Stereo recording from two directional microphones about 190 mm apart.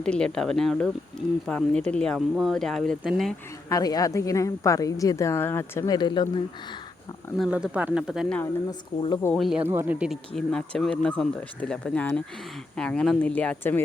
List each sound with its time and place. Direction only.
0.0 s speech: 5° left (ahead or behind)
3.7 s a woman's voice: 20° left (ahead or behind)
7.3 s speech: 5° right (ahead or behind)